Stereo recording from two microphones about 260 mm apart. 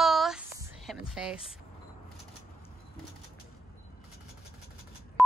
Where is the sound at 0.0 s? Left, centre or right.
Centre.